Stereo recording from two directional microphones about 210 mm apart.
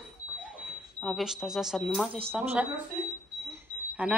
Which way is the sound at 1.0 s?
Centre (ahead or behind).